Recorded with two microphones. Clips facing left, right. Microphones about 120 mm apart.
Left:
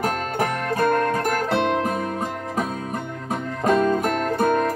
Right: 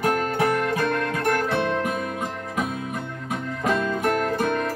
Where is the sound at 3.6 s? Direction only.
35° left (ahead or behind).